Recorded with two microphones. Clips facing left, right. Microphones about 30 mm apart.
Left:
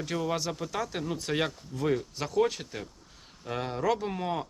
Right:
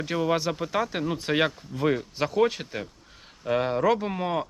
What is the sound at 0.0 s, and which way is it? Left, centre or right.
Speech, right.